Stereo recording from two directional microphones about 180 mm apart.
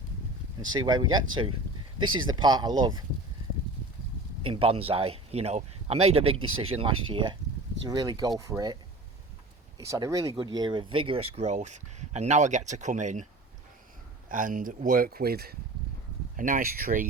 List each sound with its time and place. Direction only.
0.7 s speech: 25° right (ahead or behind)
4.4 s speech: 30° right (ahead or behind)
14.3 s speech: 50° right (ahead or behind)